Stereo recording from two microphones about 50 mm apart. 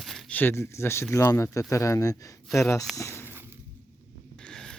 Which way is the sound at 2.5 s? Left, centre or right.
Left.